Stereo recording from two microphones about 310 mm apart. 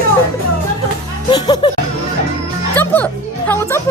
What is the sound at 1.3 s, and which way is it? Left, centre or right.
Music, centre.